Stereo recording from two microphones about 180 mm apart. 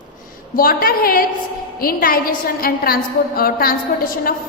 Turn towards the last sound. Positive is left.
turn(degrees=55)  # may be behind; listen again after turning